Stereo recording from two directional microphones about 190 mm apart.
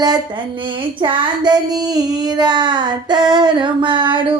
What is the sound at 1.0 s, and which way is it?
Child singing, 25° right (ahead or behind).